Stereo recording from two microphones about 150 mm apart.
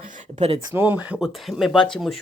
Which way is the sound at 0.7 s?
10° right (ahead or behind).